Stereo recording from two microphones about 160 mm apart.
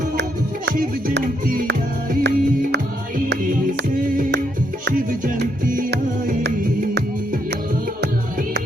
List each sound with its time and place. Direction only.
0.2 s music: 75° right (ahead or behind); by 1.7 s 60° right (ahead or behind)
2.2 s music: 90° right
3.2 s music: 60° right (ahead or behind); by 7.0 s 75° right (ahead or behind)